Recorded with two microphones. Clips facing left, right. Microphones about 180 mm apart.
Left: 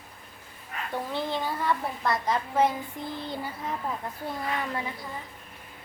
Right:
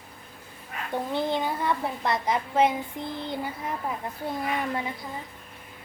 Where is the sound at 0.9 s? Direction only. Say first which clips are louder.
Right 4 dB; 15° right (ahead or behind).